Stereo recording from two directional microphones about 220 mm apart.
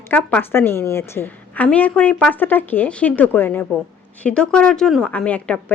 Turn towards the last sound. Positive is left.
turn(degrees=5)  # may be behind; listen again after turning